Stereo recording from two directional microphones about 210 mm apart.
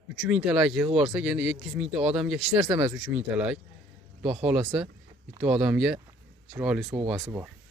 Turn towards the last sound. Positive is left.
turn(degrees=-10)  # may be behind; listen again after turning